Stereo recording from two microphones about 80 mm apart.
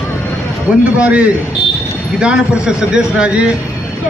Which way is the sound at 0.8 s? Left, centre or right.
Centre.